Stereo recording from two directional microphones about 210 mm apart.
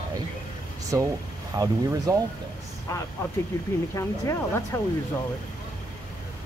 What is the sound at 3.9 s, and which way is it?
Speech, 15° left (ahead or behind).